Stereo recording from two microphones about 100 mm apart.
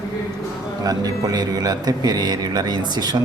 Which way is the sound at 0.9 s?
40° right (ahead or behind).